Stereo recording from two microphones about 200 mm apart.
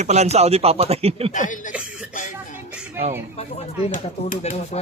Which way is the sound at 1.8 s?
5° right (ahead or behind).